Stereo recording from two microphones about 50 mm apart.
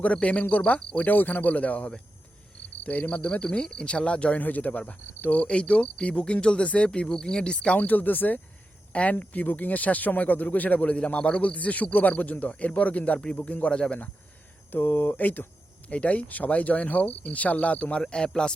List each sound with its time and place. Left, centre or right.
0.0 s speech: left
7.8 s speech: left; by 14.0 s centre
14.7 s speech: left
18.0 s speech: centre